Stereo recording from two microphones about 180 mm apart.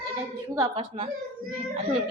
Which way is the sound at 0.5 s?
20° right (ahead or behind).